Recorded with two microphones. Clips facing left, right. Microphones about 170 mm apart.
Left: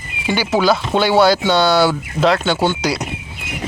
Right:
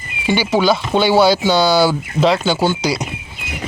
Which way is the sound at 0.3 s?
Centre (ahead or behind).